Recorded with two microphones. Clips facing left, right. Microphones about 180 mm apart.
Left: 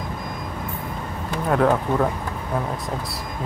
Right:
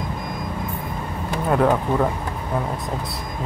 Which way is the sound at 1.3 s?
10° right (ahead or behind).